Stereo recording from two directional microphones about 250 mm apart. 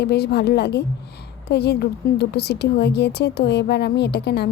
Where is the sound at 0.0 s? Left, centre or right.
Left.